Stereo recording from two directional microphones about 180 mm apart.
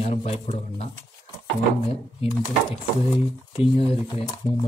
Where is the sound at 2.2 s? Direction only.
30° left (ahead or behind).